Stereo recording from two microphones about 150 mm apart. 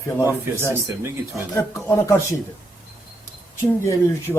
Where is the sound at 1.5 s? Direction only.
15° left (ahead or behind).